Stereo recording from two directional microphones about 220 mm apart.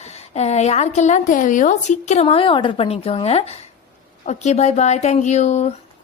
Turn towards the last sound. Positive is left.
turn(degrees=30)  # may be behind; listen again after turning